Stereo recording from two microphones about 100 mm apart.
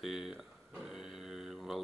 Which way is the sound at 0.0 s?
Centre (ahead or behind).